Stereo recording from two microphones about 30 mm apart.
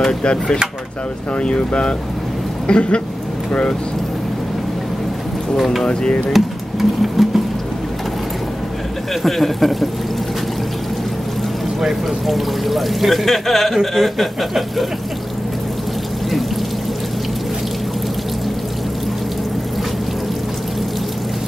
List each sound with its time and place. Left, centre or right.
0.2 s speech: left
6.3 s music: centre
9.2 s speech: centre
11.8 s speech: centre